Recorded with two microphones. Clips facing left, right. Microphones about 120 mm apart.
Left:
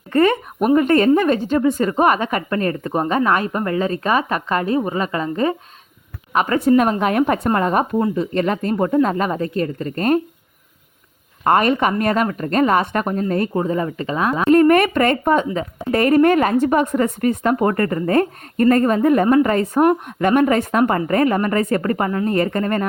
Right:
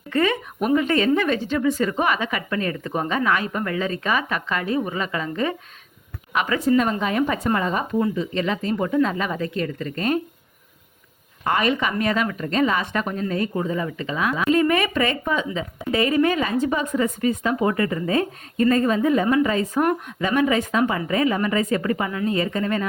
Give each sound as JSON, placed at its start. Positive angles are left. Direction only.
{"t": 0.1, "sound": "a woman's voice", "side_deg": 45}
{"t": 11.4, "sound": "speech", "side_deg": 45}